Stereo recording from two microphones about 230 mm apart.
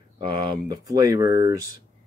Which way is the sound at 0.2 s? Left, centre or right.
Centre.